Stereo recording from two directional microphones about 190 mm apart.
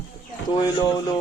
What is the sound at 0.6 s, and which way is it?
Speech, 20° left (ahead or behind).